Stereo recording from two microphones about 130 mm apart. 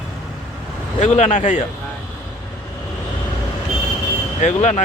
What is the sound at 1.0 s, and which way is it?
Speech, 65° left (ahead or behind).